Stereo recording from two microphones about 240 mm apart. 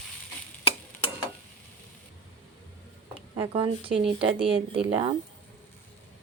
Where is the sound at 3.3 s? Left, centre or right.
Right.